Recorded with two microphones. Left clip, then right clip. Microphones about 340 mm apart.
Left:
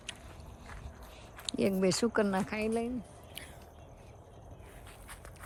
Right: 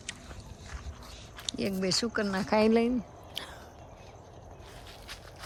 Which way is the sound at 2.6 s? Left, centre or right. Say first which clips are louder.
Right 8 dB; right.